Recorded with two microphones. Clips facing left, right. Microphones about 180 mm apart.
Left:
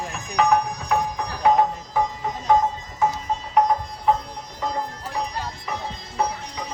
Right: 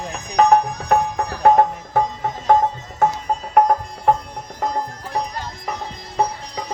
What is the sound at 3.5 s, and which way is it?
Music, 55° right (ahead or behind).